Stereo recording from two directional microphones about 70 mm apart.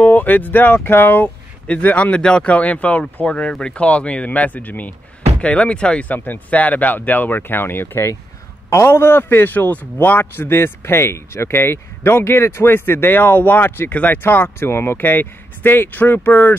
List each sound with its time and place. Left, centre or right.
0.0 s speech: left
3.3 s a man's voice: centre; by 16.5 s left